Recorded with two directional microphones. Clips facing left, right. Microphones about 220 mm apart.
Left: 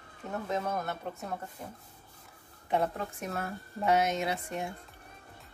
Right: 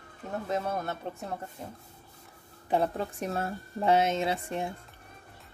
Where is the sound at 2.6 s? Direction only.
30° right (ahead or behind).